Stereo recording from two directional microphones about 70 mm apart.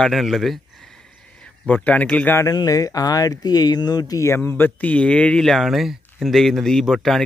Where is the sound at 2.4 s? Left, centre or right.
Left.